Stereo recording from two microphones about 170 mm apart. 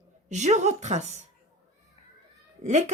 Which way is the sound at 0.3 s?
45° right (ahead or behind).